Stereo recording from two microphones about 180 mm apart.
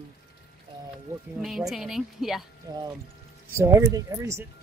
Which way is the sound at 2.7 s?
20° right (ahead or behind).